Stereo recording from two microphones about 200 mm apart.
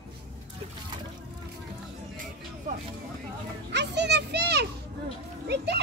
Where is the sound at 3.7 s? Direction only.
60° right (ahead or behind).